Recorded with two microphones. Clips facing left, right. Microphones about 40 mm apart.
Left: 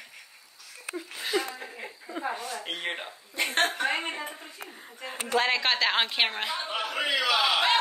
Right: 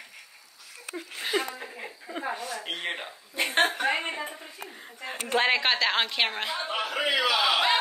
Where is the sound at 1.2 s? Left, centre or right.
Centre.